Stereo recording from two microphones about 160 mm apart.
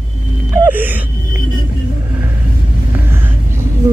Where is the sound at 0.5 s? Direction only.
10° right (ahead or behind).